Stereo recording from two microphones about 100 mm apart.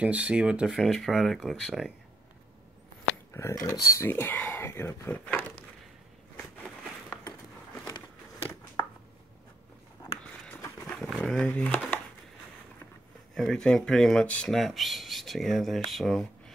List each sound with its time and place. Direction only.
0.0 s speech: 15° right (ahead or behind)
3.3 s speech: 30° left (ahead or behind)
5.1 s speech: 15° left (ahead or behind)
6.3 s a sound: 20° left (ahead or behind)
11.0 s a sound: centre (ahead or behind)
11.4 s speech: 10° left (ahead or behind)
13.3 s speech: 5° left (ahead or behind)
14.5 s speech: centre (ahead or behind)